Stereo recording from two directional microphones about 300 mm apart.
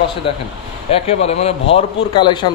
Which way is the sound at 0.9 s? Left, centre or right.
Left.